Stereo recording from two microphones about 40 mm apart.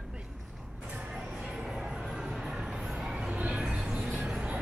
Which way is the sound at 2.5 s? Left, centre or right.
Right.